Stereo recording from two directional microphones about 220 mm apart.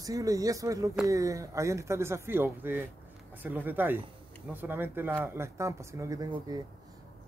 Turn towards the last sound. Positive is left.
turn(degrees=-15)  # may be behind; listen again after turning